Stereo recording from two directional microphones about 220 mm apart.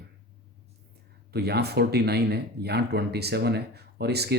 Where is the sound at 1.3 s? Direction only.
45° right (ahead or behind).